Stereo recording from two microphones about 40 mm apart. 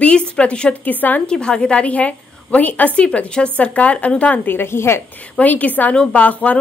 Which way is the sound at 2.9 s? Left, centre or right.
Left.